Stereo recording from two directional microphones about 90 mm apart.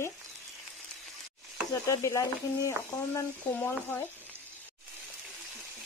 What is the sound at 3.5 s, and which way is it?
Speech, 20° left (ahead or behind).